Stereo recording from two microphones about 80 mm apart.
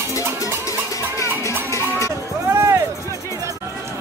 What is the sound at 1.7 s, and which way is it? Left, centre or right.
Cowbell, left.